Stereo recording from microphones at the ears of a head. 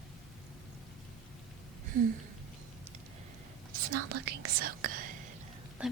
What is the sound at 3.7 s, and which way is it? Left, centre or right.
Speech, right.